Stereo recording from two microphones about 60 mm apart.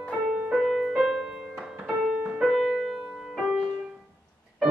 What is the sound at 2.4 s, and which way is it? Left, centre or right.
Music, centre.